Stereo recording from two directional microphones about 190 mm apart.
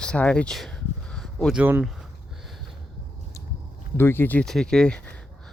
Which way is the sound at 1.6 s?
10° right (ahead or behind).